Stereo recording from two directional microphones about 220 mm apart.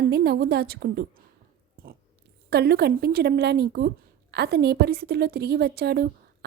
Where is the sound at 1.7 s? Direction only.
40° right (ahead or behind).